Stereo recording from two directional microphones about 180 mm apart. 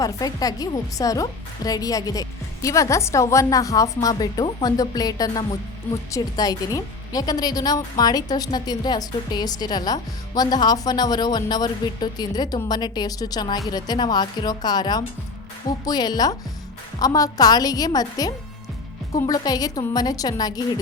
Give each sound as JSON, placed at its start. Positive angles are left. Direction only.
{"t": 0.0, "sound": "a woman's voice", "side_deg": 20}